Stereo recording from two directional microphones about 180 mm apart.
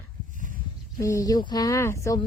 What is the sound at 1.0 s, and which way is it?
Speech, 20° left (ahead or behind).